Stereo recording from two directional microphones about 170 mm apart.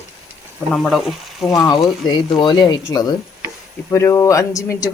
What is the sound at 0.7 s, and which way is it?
Speech, centre (ahead or behind).